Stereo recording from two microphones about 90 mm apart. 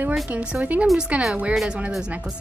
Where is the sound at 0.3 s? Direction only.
15° right (ahead or behind).